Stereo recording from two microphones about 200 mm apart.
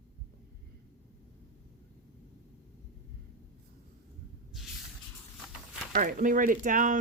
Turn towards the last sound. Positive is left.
turn(degrees=-40)  # may be behind; listen again after turning